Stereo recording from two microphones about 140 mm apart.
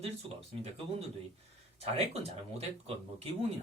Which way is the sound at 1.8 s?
45° right (ahead or behind).